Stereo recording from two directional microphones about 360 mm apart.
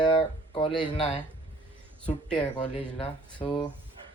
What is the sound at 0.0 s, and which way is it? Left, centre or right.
Speech, centre.